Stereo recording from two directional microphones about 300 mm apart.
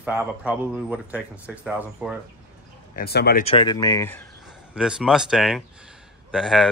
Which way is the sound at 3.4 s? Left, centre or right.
Centre.